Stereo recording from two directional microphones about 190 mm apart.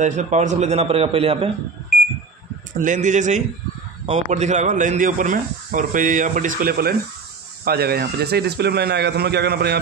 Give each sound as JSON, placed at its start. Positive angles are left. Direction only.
{"t": 0.0, "sound": "a man's voice", "side_deg": -40}
{"t": 2.7, "sound": "a man's voice", "side_deg": -40}